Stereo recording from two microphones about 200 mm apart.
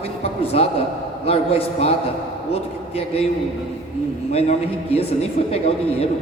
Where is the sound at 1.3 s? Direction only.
30° left (ahead or behind).